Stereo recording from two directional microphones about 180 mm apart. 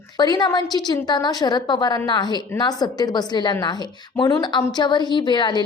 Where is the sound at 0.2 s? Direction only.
25° left (ahead or behind).